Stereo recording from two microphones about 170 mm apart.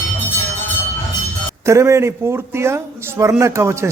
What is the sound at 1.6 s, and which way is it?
Speech, 15° right (ahead or behind).